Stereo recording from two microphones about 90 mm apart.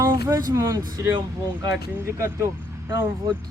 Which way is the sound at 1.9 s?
30° right (ahead or behind).